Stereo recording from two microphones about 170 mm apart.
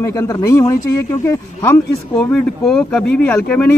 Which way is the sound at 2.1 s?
5° left (ahead or behind).